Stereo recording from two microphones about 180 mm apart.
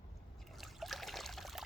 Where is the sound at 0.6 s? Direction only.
Centre (ahead or behind).